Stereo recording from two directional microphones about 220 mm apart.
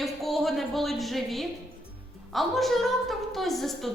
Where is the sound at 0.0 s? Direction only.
Centre (ahead or behind).